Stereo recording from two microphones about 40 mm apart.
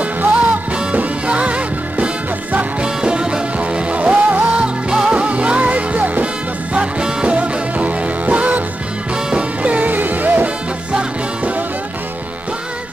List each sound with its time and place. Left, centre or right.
0.2 s music: right; by 3.4 s centre
3.5 s music: right
4.8 s music: centre
5.1 s music: right
9.1 s music: right
9.6 s music: right